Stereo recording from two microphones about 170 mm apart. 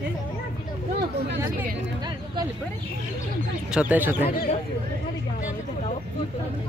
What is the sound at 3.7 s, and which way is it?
Speech, 10° right (ahead or behind).